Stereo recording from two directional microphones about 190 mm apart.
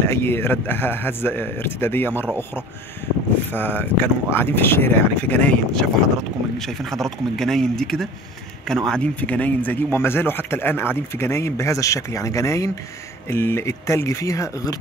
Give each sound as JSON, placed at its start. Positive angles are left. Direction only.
{"t": 0.0, "sound": "a man's voice", "side_deg": 10}
{"t": 3.4, "sound": "a man's voice", "side_deg": 10}